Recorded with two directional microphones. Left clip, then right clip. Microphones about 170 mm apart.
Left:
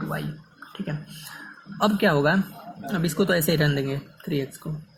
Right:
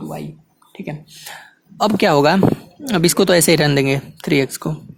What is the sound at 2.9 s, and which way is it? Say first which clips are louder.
Speech: right 10 dB; 75° right (ahead or behind).